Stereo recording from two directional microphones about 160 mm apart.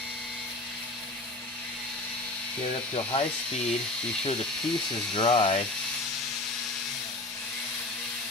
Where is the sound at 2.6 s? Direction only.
35° left (ahead or behind).